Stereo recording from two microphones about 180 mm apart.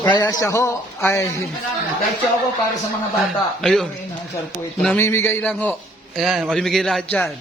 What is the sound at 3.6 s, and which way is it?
A man's voice, centre (ahead or behind).